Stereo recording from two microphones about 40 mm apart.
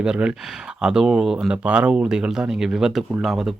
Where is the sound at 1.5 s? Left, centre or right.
Right.